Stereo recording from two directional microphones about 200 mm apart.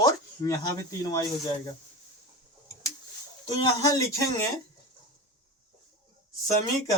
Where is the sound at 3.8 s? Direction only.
15° left (ahead or behind).